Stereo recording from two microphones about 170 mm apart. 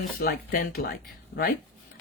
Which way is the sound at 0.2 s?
65° left (ahead or behind).